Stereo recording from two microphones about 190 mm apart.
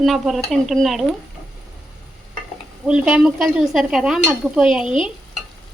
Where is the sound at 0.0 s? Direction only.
Centre (ahead or behind).